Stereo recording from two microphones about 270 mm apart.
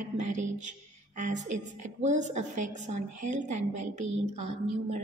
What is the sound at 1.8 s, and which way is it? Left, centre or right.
A woman's voice, right.